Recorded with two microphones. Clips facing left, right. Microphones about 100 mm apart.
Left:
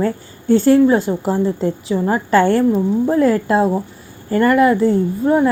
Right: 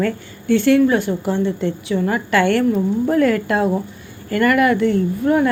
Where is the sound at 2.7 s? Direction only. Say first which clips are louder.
Left 2 dB; 20° left (ahead or behind).